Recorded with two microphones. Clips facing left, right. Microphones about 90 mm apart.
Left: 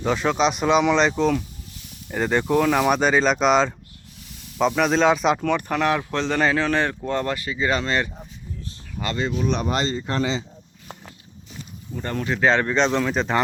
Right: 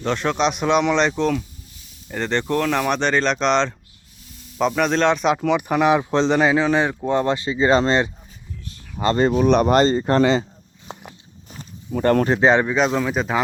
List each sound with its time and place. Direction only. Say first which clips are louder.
0.0 s speech: even; 5° left (ahead or behind); by 8.1 s 25° right (ahead or behind)
9.1 s speech: right 8 dB; 45° right (ahead or behind)
11.9 s speech: right 11 dB; 65° right (ahead or behind)
12.4 s speech: left 1 dB; 15° right (ahead or behind)
12.6 s speech: right 1 dB; 5° right (ahead or behind)